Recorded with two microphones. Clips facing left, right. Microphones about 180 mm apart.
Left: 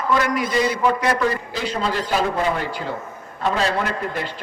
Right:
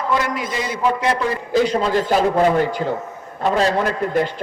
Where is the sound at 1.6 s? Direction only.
45° right (ahead or behind).